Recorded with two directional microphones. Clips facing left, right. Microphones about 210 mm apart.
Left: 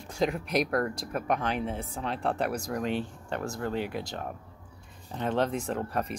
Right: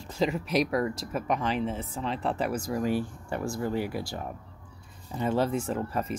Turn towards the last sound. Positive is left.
turn(degrees=-5)  # may be behind; listen again after turning